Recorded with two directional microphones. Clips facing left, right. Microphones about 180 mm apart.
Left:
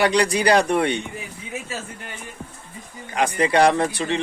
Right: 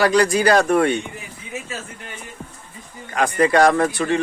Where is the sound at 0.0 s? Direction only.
20° left (ahead or behind).